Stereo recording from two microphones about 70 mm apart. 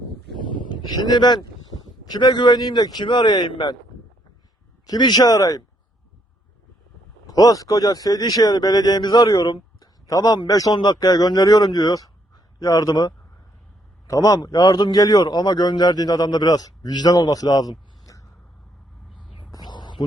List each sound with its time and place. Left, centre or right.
0.7 s speech: left
4.9 s a man's voice: left
7.3 s speech: left
14.1 s a man's voice: left
19.5 s whispering: left